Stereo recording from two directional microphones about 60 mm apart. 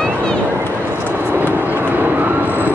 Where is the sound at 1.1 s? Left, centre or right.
Right.